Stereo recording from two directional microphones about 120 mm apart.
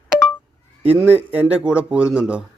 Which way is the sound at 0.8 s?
10° right (ahead or behind).